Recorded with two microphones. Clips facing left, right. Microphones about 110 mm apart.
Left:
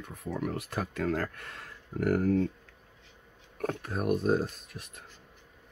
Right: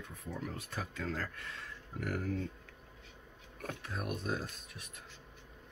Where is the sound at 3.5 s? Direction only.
50° left (ahead or behind).